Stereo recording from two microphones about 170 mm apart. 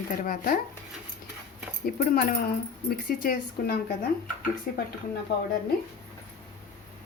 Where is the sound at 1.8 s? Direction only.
60° left (ahead or behind).